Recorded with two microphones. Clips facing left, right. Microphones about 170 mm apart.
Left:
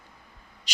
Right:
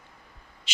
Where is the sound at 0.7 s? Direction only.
40° left (ahead or behind).